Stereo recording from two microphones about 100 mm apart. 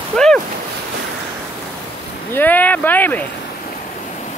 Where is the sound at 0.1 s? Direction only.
5° left (ahead or behind).